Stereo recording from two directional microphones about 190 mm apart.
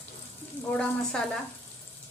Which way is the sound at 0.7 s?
5° left (ahead or behind).